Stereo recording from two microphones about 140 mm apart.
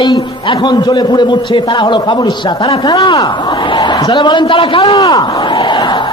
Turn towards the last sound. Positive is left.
turn(degrees=35)  # may be behind; listen again after turning